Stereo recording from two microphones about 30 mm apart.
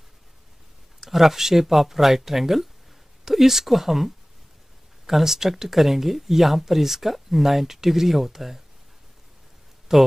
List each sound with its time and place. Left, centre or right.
1.0 s speech: centre
5.1 s speech: centre
9.9 s speech: centre